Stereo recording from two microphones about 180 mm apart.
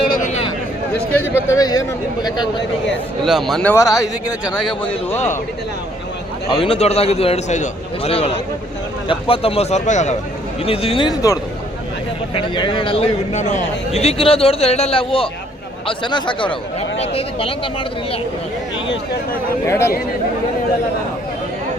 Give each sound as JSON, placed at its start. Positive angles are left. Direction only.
{"t": 0.1, "sound": "a sound", "side_deg": 45}
{"t": 1.1, "sound": "a man's voice", "side_deg": 10}
{"t": 3.2, "sound": "a man's voice", "side_deg": 0}
{"t": 6.5, "sound": "a man's voice", "side_deg": 30}
{"t": 19.6, "sound": "a man's voice", "side_deg": 15}